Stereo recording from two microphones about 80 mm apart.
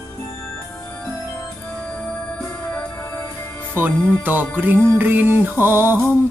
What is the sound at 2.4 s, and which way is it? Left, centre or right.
Music, left.